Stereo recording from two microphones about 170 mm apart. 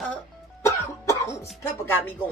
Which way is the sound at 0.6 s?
15° left (ahead or behind).